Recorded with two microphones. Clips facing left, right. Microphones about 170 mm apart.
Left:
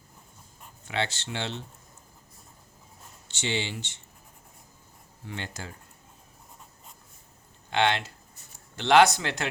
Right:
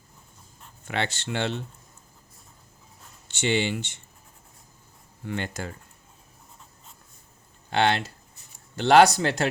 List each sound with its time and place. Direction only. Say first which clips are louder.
0.9 s speech: right 2 dB; 55° right (ahead or behind)
3.2 s speech: right 6 dB; 55° right (ahead or behind)
5.2 s speech: right 7 dB; 55° right (ahead or behind)
7.7 s speech: right 2 dB; 40° right (ahead or behind)